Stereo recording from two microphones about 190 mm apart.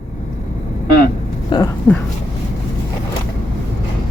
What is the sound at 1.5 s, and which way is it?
Speech, 25° left (ahead or behind).